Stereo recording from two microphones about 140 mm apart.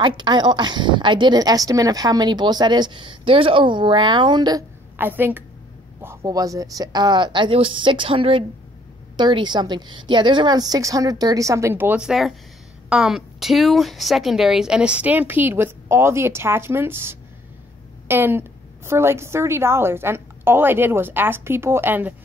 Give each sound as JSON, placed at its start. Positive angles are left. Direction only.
{"t": 0.0, "sound": "a woman's voice", "side_deg": -35}
{"t": 4.9, "sound": "a woman's voice", "side_deg": -15}
{"t": 6.0, "sound": "a woman's voice", "side_deg": -25}